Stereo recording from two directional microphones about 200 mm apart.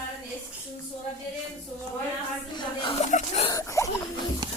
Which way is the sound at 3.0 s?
35° left (ahead or behind).